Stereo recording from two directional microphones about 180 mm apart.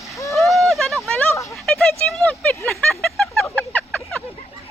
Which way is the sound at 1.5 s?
Centre (ahead or behind).